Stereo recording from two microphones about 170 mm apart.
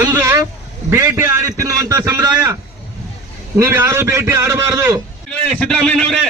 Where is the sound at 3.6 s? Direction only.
15° right (ahead or behind).